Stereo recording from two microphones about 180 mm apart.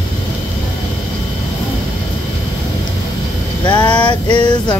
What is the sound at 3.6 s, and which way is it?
Music, 25° left (ahead or behind).